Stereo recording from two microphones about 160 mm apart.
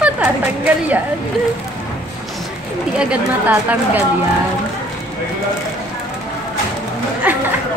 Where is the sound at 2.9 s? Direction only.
5° right (ahead or behind).